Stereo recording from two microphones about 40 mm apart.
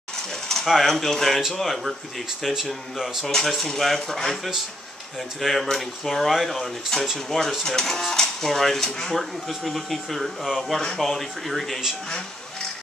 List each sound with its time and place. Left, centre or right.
0.1 s a sound: centre
0.8 s speech: centre
3.3 s speech: centre
9.2 s speech: centre